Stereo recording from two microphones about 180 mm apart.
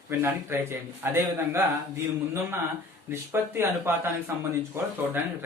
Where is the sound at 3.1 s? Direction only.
15° right (ahead or behind).